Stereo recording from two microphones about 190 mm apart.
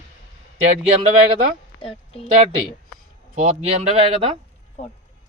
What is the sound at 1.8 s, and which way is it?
Speech, 30° left (ahead or behind).